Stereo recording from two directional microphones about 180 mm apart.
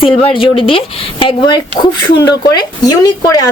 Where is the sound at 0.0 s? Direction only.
30° left (ahead or behind).